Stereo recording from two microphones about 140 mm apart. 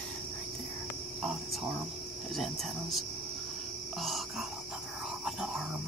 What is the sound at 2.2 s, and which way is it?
Speech, centre (ahead or behind).